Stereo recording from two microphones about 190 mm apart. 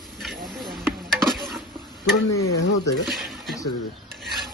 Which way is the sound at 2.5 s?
65° left (ahead or behind).